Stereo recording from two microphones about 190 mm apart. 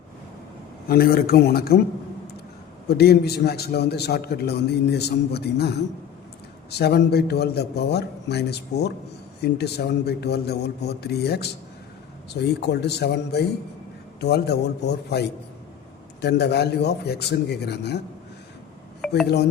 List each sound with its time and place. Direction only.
0.9 s speech: 50° left (ahead or behind)
2.9 s a man's voice: 55° left (ahead or behind)
19.0 s a sound: centre (ahead or behind)